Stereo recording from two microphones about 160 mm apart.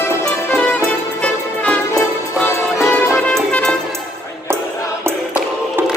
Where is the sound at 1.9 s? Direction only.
20° left (ahead or behind).